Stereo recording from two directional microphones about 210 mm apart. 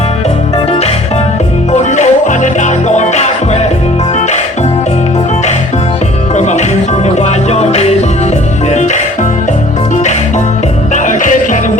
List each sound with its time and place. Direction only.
1.7 s music: 35° left (ahead or behind)
6.3 s music: 35° left (ahead or behind)
10.9 s music: 35° left (ahead or behind)